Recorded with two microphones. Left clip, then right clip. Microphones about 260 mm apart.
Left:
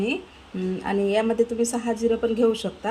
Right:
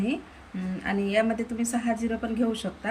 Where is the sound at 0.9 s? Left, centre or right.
Centre.